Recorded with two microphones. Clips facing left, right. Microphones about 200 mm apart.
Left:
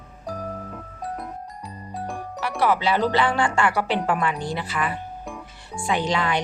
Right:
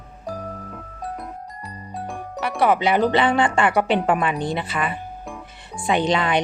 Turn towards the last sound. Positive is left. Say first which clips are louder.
# right 3 dB
turn(degrees=-20)  # may be behind; listen again after turning